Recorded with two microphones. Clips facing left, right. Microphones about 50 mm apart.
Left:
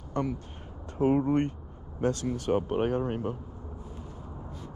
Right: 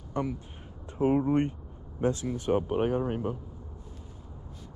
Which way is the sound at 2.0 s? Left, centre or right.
Centre.